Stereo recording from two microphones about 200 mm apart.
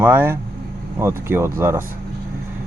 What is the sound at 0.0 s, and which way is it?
Speech, 10° right (ahead or behind).